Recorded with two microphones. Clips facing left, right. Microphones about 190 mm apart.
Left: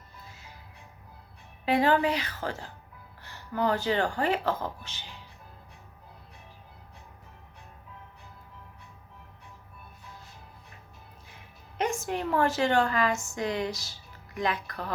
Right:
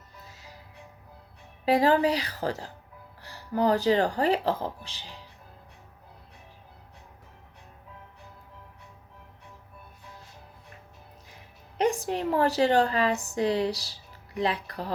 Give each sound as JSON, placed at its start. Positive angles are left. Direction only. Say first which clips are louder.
{"t": 1.6, "sound": "a woman's voice", "louder": "right 2 dB", "side_deg": -35}
{"t": 11.8, "sound": "a woman's voice", "louder": "right 4 dB", "side_deg": -35}